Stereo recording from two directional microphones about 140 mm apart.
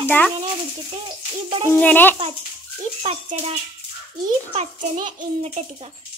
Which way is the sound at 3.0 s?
45° right (ahead or behind).